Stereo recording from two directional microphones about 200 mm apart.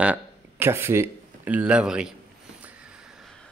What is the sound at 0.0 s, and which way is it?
Speech, 10° right (ahead or behind).